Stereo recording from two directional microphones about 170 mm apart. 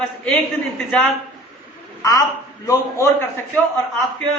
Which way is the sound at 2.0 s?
20° left (ahead or behind).